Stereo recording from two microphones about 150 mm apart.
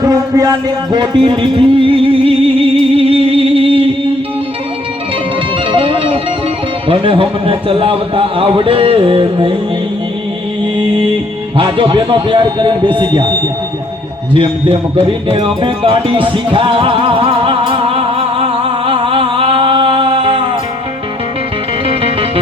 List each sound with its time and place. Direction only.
0.0 s music: 25° right (ahead or behind); by 3.8 s 40° right (ahead or behind)
5.7 s music: 35° right (ahead or behind)
6.8 s a man's voice: 35° right (ahead or behind)
11.5 s a man's voice: 35° right (ahead or behind)
14.3 s music: 35° right (ahead or behind)
21.8 s music: 40° right (ahead or behind)